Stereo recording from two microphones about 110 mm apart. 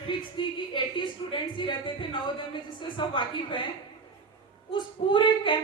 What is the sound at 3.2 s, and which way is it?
Speech, 50° left (ahead or behind).